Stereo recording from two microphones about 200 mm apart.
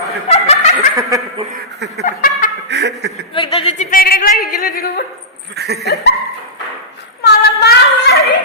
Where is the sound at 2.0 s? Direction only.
40° left (ahead or behind).